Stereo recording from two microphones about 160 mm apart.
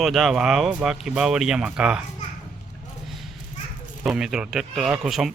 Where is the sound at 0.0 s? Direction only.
Centre (ahead or behind).